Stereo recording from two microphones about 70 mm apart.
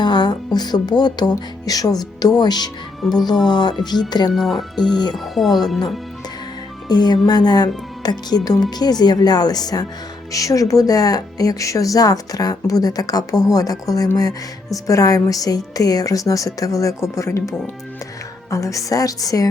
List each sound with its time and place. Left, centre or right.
0.0 s speech: left
3.0 s speech: centre
3.4 s speech: left
4.4 s speech: centre
6.8 s speech: left
10.3 s speech: left
18.5 s speech: left